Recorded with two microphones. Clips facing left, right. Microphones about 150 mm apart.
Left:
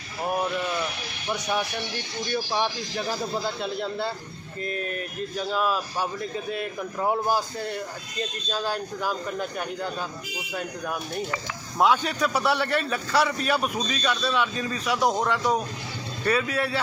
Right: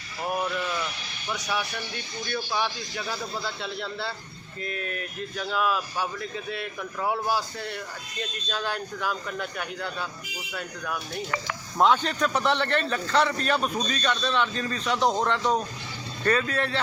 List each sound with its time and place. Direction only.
2.3 s speech: 25° left (ahead or behind)
4.6 s speech: 35° left (ahead or behind)
8.6 s speech: 40° left (ahead or behind)
11.8 s a man's voice: 10° left (ahead or behind)